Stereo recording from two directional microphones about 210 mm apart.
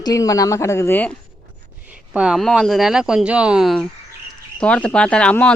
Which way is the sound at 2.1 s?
5° right (ahead or behind).